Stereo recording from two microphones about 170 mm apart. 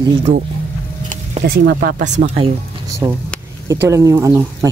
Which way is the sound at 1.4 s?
65° right (ahead or behind).